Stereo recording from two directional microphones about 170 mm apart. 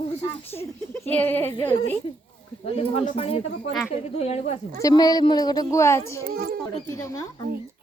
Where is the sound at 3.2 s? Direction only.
35° left (ahead or behind).